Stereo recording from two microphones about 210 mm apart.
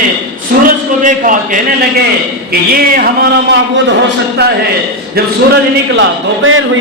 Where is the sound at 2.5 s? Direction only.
45° right (ahead or behind).